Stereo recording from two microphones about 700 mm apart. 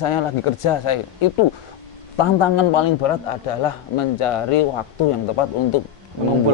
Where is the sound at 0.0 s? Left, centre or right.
Left.